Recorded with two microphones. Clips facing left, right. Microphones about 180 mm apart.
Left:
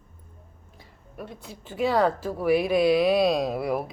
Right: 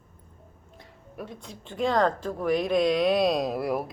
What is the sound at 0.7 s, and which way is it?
Speech, centre (ahead or behind).